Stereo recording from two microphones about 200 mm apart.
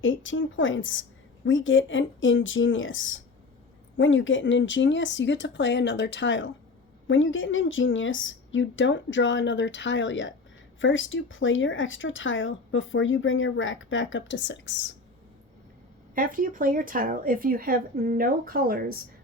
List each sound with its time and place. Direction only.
0.0 s speech: 75° left (ahead or behind)
16.1 s speech: 45° right (ahead or behind)